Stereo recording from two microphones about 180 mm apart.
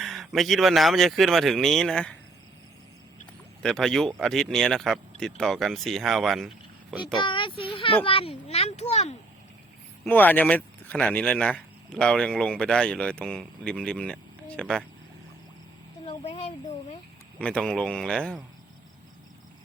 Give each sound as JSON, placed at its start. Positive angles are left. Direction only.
{"t": 0.0, "sound": "speech", "side_deg": 0}
{"t": 3.6, "sound": "speech", "side_deg": 5}
{"t": 7.2, "sound": "a sound", "side_deg": 25}
{"t": 8.0, "sound": "a child's voice", "side_deg": 30}
{"t": 10.1, "sound": "speech", "side_deg": 10}
{"t": 16.0, "sound": "speech", "side_deg": 40}
{"t": 17.4, "sound": "speech", "side_deg": 5}